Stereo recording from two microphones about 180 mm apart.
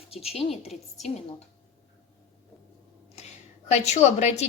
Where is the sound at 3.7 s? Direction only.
40° left (ahead or behind).